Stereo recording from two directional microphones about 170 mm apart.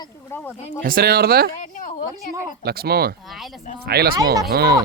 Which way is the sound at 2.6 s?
70° right (ahead or behind).